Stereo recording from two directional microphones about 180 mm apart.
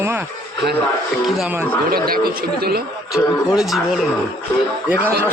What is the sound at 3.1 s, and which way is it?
Speech, centre (ahead or behind).